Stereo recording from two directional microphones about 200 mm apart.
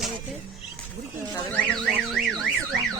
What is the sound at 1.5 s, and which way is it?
Car alarm, 5° left (ahead or behind).